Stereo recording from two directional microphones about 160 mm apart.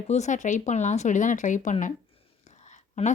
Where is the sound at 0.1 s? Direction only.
50° left (ahead or behind).